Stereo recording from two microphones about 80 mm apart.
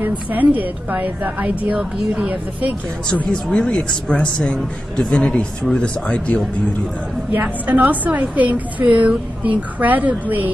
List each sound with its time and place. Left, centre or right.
0.0 s a woman's voice: right
3.1 s speech: centre
7.3 s a woman's voice: right